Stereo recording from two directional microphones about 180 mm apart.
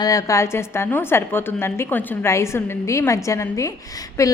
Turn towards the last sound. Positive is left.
turn(degrees=20)  # may be behind; listen again after turning